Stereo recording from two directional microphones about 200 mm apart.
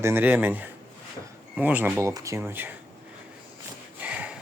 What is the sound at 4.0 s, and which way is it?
Snort, 5° right (ahead or behind).